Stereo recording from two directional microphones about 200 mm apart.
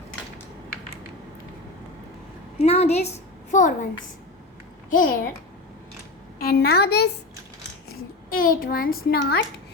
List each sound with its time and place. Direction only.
2.6 s a woman's voice: 30° left (ahead or behind)
4.9 s a woman's voice: 45° left (ahead or behind)
6.4 s a woman's voice: 50° left (ahead or behind)